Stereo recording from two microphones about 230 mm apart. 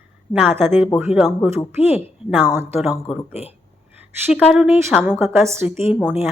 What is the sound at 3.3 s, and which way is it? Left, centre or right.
Speech, left.